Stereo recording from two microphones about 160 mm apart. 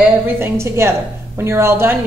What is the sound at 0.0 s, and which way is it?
A woman's voice, 15° right (ahead or behind).